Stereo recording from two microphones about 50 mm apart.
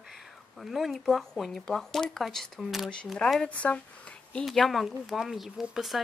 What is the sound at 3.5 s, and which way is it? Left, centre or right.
Speech, left.